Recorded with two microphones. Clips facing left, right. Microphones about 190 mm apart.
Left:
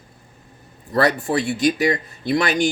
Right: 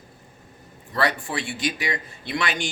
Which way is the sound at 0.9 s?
40° left (ahead or behind).